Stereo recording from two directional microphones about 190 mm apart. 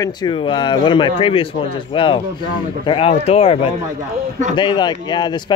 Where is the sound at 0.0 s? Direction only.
25° left (ahead or behind).